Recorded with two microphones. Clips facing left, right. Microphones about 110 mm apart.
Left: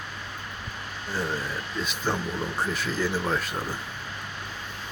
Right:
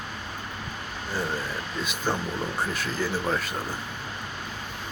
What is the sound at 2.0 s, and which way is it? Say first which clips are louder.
Speech: right 1 dB; 15° right (ahead or behind).